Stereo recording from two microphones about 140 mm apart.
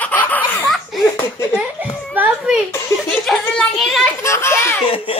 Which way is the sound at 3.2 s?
5° left (ahead or behind).